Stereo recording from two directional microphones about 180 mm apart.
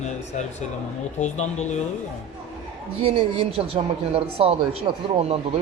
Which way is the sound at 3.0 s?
30° right (ahead or behind).